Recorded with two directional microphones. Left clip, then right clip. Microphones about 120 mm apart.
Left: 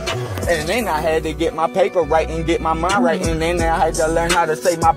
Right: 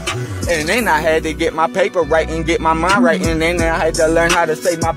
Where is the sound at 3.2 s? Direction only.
10° right (ahead or behind).